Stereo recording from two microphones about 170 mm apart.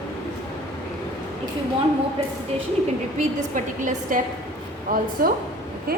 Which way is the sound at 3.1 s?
50° right (ahead or behind).